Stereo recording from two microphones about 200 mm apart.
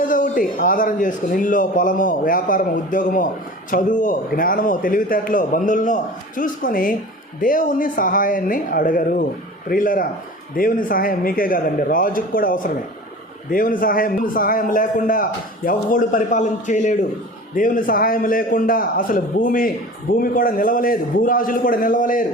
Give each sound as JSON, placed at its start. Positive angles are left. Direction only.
{"t": 0.0, "sound": "a man's voice", "side_deg": 40}